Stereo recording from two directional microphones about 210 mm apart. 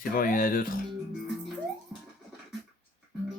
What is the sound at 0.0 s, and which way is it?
Speech, 40° left (ahead or behind).